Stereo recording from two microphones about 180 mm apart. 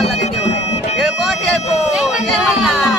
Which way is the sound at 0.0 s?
35° left (ahead or behind).